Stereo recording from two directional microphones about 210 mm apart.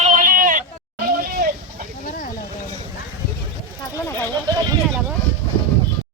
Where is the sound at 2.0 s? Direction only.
40° left (ahead or behind).